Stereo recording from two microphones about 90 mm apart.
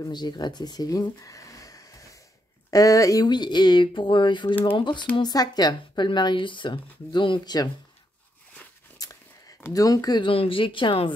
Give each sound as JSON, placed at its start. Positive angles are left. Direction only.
{"t": 0.0, "sound": "speech", "side_deg": 55}
{"t": 3.3, "sound": "speech", "side_deg": 55}
{"t": 5.3, "sound": "speech", "side_deg": 45}
{"t": 8.9, "sound": "a sound", "side_deg": 40}
{"t": 10.2, "sound": "speech", "side_deg": 85}